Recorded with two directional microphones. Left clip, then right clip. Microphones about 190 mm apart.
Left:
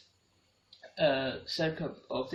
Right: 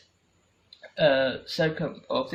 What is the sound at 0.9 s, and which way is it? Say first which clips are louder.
Speech: right 7 dB; 40° right (ahead or behind).